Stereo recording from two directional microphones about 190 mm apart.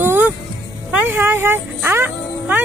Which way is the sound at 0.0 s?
10° right (ahead or behind).